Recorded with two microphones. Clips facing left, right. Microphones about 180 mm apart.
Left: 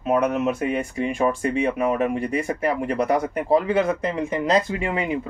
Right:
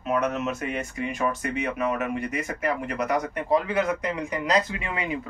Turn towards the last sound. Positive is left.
turn(degrees=25)  # may be behind; listen again after turning